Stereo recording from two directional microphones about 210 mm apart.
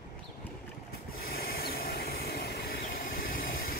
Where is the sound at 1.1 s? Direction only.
45° left (ahead or behind).